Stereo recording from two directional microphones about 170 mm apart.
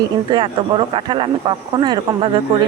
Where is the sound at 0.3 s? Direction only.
30° right (ahead or behind).